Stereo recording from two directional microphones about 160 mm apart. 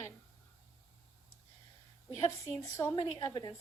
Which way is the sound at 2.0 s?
20° left (ahead or behind).